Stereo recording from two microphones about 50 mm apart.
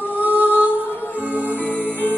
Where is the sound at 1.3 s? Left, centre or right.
Left.